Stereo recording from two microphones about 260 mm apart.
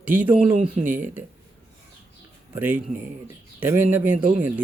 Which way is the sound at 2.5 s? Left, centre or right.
Centre.